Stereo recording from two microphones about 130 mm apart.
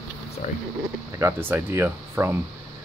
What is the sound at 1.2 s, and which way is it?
Speech, 15° right (ahead or behind).